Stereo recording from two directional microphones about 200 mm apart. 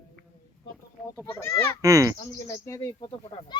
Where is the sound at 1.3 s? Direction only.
15° left (ahead or behind).